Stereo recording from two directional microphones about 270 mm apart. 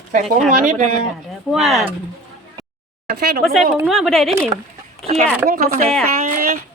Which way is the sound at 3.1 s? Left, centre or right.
Right.